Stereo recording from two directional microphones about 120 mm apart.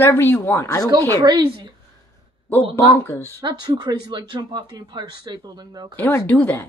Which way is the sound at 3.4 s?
40° right (ahead or behind).